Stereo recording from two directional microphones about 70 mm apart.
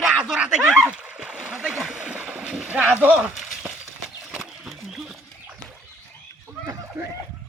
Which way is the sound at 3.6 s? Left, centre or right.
Centre.